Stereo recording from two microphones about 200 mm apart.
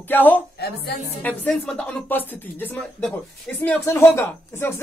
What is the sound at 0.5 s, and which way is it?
Speech, 55° left (ahead or behind).